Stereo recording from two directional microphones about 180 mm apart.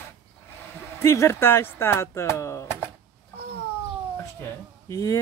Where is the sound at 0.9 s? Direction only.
15° left (ahead or behind).